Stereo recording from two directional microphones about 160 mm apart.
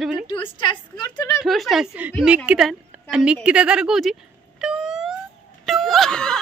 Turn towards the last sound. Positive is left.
turn(degrees=5)  # may be behind; listen again after turning